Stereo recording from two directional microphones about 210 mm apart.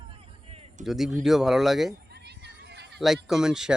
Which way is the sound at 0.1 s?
30° right (ahead or behind).